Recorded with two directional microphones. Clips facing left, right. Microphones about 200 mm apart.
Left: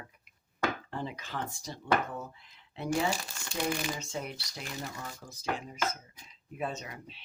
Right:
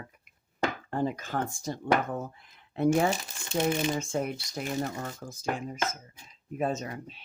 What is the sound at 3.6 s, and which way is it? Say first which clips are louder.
Speech: right 6 dB; 25° right (ahead or behind).